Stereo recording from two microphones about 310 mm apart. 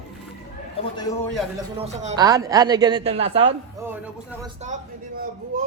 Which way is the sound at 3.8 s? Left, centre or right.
Centre.